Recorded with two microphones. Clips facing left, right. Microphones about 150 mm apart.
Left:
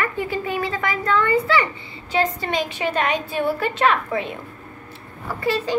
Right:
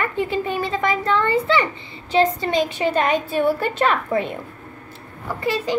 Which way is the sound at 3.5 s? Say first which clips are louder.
Even; 40° right (ahead or behind).